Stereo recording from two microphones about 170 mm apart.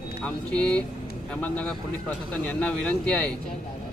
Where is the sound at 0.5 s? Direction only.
5° left (ahead or behind).